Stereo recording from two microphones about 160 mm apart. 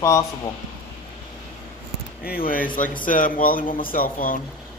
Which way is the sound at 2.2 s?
65° left (ahead or behind).